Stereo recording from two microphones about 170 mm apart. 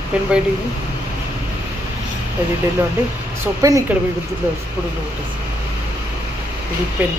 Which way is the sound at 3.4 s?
20° right (ahead or behind).